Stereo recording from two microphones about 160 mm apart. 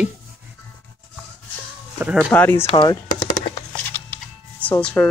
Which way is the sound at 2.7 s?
25° left (ahead or behind).